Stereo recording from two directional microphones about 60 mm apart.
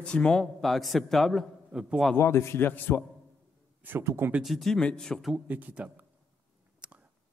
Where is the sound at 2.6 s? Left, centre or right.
Left.